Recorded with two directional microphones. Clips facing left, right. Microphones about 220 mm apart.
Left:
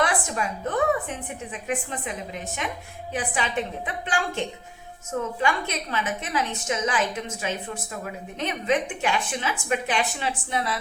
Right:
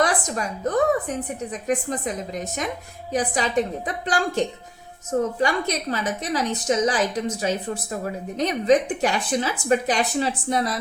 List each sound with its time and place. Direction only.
0.0 s a woman's voice: 40° right (ahead or behind)